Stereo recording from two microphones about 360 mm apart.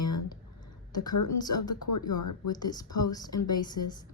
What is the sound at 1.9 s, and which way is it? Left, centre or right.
Speech, left.